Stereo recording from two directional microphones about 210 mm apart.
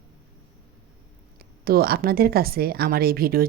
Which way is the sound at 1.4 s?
45° right (ahead or behind).